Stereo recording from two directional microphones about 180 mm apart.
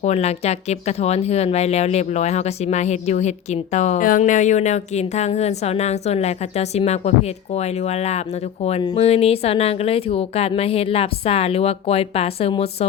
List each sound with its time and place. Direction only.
0.0 s speech: 35° left (ahead or behind)